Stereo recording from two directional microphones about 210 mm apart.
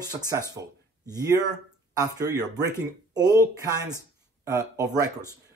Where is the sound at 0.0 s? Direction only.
15° right (ahead or behind).